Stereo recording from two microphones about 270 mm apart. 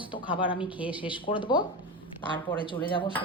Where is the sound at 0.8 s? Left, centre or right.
Centre.